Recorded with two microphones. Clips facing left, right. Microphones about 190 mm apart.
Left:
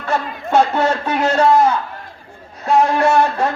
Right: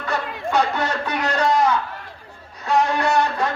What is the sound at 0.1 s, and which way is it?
Music, 45° left (ahead or behind).